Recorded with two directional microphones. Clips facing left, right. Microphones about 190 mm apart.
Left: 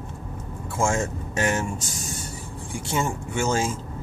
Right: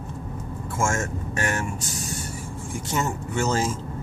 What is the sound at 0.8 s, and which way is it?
Speech, 15° left (ahead or behind).